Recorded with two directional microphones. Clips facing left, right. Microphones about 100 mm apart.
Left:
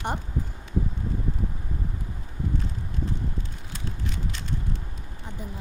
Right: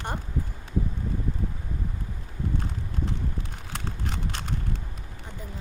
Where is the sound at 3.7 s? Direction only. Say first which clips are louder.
Right 1 dB; 60° right (ahead or behind).